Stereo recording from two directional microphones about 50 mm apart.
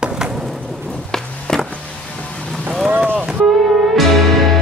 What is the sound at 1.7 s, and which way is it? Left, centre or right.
Music, left.